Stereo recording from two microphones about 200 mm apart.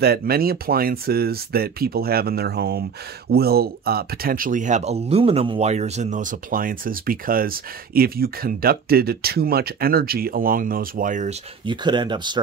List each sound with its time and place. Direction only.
0.0 s speech: 50° right (ahead or behind)
11.6 s speech: 20° right (ahead or behind)